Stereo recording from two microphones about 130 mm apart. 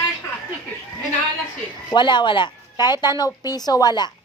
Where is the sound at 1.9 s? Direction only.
35° left (ahead or behind).